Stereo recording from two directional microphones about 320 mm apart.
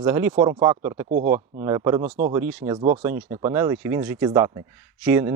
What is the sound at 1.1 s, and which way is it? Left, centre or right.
Speech, right.